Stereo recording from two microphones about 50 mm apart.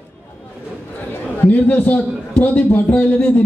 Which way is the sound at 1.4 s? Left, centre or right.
Left.